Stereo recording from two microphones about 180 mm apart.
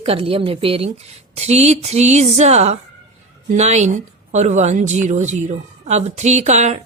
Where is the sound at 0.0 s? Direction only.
30° right (ahead or behind).